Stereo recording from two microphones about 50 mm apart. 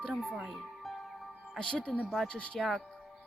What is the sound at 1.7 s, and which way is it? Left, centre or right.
Speech, left.